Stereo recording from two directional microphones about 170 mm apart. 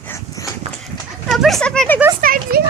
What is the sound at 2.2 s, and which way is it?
Speech, 60° right (ahead or behind).